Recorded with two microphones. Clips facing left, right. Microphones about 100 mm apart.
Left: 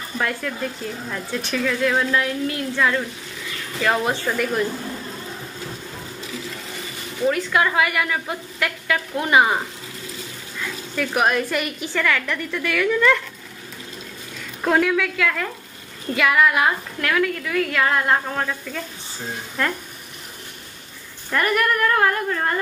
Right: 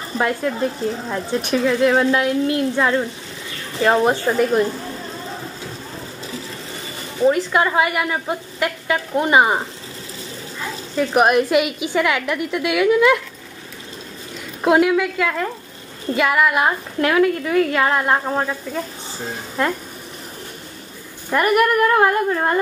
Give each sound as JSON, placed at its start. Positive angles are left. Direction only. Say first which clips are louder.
{"t": 0.2, "sound": "speech", "louder": "right 6 dB", "side_deg": -25}
{"t": 7.2, "sound": "a woman's voice", "louder": "right 4 dB", "side_deg": -25}
{"t": 14.6, "sound": "a woman's voice", "louder": "right 4 dB", "side_deg": -15}
{"t": 16.5, "sound": "a woman's voice", "louder": "right 2 dB", "side_deg": -25}
{"t": 21.3, "sound": "speech", "louder": "right 4 dB", "side_deg": -15}